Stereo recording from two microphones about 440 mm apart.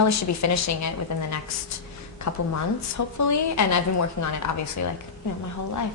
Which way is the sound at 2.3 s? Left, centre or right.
Left.